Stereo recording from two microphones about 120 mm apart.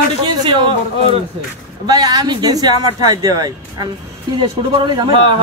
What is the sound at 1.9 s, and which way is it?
Speech, 35° right (ahead or behind).